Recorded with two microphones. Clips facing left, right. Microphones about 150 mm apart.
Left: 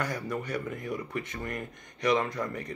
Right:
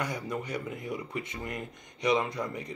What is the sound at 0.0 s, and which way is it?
Speech, 20° right (ahead or behind).